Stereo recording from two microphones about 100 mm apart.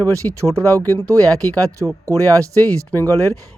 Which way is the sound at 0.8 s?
20° left (ahead or behind).